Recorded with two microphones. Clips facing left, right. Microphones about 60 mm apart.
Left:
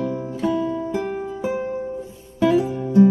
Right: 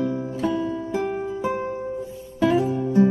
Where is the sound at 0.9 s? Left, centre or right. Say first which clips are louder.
Even; centre.